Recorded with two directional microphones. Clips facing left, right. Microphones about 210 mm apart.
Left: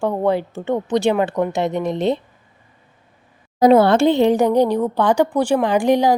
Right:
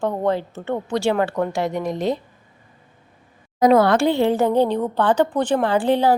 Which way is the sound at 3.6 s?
25° left (ahead or behind).